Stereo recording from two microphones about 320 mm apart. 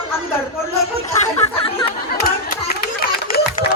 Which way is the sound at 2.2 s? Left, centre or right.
Left.